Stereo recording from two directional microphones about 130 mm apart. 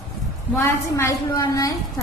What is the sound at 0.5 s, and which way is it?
A woman's voice, 20° left (ahead or behind).